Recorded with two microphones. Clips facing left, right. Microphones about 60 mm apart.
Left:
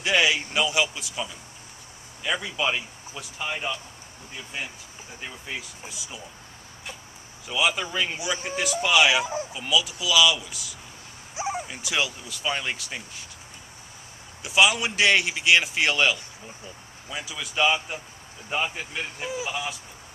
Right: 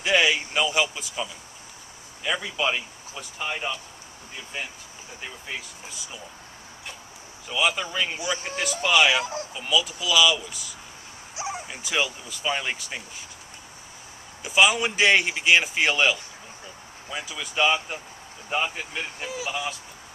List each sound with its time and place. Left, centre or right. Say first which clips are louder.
0.0 s a sound: right 1 dB; centre
0.5 s a man's voice: even; centre
5.2 s a man's voice: even; centre
7.4 s a man's voice: even; centre
11.3 s a sound: left 3 dB; left
11.6 s a man's voice: right 1 dB; centre
14.4 s a man's voice: right 1 dB; centre
19.2 s speech: left 2 dB; centre